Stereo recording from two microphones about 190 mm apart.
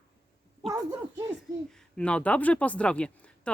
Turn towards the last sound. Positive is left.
turn(degrees=5)  # may be behind; listen again after turning